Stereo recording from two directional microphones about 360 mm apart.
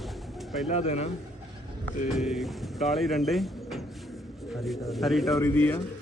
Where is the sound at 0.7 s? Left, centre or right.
Centre.